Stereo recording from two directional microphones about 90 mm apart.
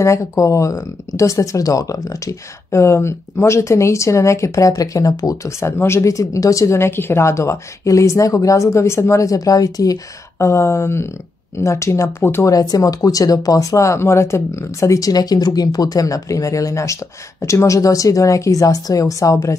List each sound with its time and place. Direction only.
0.0 s speech: 35° left (ahead or behind)
10.4 s speech: 30° left (ahead or behind)
12.4 s speech: 40° left (ahead or behind)